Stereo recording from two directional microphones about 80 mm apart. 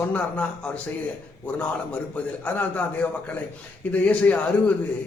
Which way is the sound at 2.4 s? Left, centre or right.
Centre.